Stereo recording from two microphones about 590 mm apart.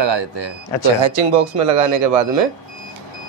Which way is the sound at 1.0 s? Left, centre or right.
Right.